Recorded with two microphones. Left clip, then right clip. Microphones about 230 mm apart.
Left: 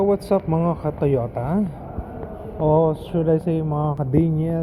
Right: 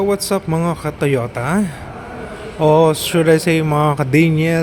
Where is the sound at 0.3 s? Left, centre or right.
Right.